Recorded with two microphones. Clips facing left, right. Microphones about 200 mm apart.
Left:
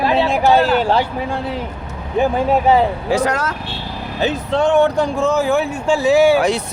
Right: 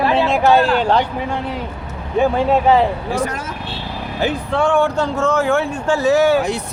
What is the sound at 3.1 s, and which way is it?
Speech, 80° left.